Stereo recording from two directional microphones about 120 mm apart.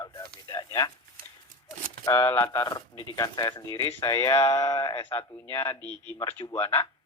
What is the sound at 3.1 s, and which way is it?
Speech, 30° left (ahead or behind).